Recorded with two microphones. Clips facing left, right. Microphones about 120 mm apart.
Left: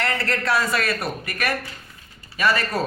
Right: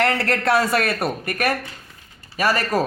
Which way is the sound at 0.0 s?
60° right (ahead or behind).